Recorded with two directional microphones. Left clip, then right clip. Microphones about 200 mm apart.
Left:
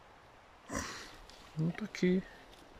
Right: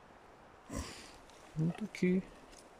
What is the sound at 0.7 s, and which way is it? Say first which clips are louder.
Sniff: left 5 dB; 5° right (ahead or behind).